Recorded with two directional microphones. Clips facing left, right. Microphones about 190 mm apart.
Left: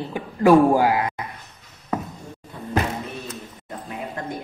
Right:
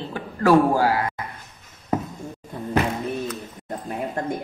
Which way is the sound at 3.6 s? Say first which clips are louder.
Right 4 dB; 45° right (ahead or behind).